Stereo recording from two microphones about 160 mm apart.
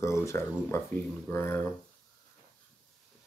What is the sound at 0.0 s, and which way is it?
Speech, 20° left (ahead or behind).